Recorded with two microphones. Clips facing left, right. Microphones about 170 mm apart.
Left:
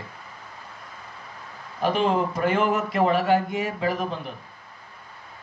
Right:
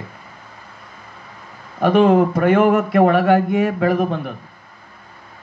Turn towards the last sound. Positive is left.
turn(degrees=-60)  # may be behind; listen again after turning